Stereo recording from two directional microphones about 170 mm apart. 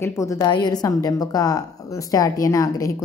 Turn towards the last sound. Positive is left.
turn(degrees=20)  # may be behind; listen again after turning